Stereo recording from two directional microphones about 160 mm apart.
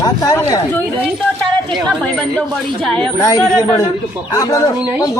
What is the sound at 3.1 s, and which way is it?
Speech, 20° left (ahead or behind).